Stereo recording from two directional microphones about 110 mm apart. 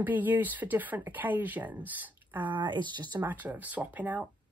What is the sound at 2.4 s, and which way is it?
Speech, 45° right (ahead or behind).